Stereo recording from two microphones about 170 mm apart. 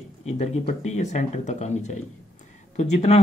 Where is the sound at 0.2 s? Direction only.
40° left (ahead or behind).